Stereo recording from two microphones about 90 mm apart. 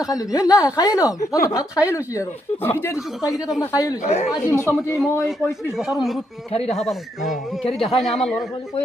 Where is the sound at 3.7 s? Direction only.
40° left (ahead or behind).